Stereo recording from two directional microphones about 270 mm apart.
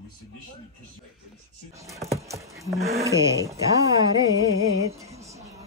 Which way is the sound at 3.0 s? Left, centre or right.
Centre.